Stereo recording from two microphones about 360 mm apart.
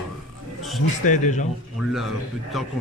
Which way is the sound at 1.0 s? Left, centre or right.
Centre.